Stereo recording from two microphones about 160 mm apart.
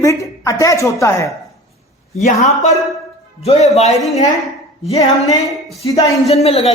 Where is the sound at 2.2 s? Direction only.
45° left (ahead or behind).